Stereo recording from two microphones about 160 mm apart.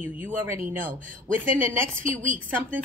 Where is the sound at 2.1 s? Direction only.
55° right (ahead or behind).